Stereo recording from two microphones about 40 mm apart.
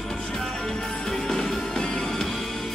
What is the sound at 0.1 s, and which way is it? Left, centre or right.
Music, centre.